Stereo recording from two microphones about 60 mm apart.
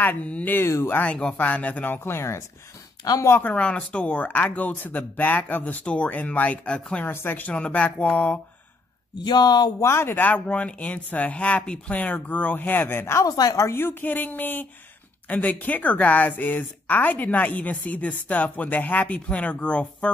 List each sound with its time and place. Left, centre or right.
0.0 s speech: left
0.6 s speech: left
1.0 s speech: centre
2.0 s speech: left
3.3 s speech: left
3.5 s speech: left
7.1 s speech: left
7.5 s speech: centre
9.8 s speech: left
13.2 s speech: left
13.7 s speech: left; by 20.1 s centre